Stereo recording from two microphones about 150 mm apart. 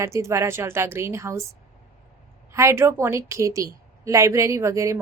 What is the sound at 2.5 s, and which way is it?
A woman's voice, 15° right (ahead or behind).